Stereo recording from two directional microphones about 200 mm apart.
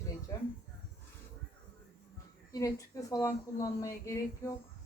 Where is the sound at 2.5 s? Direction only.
15° left (ahead or behind).